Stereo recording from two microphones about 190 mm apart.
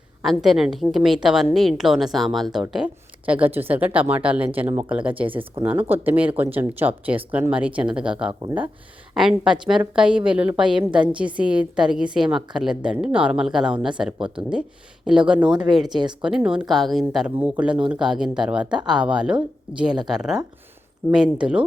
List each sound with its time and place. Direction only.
0.2 s a woman's voice: centre (ahead or behind)
15.4 s speech: 25° right (ahead or behind)
15.7 s a woman's voice: centre (ahead or behind)